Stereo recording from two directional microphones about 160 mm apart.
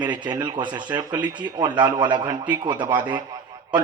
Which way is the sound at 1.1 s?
15° right (ahead or behind).